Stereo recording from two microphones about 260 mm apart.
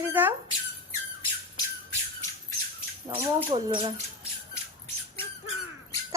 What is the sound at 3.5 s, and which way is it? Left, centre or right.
Speech, centre.